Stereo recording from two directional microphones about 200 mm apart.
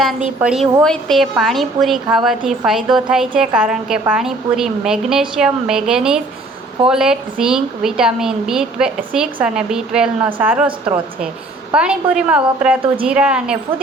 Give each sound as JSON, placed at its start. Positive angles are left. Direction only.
{"t": 0.4, "sound": "a woman's voice", "side_deg": -5}
{"t": 10.7, "sound": "a woman's voice", "side_deg": -25}
{"t": 11.7, "sound": "a woman's voice", "side_deg": -5}